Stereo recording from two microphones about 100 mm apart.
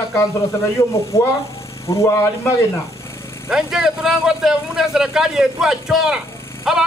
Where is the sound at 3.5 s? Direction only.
5° right (ahead or behind).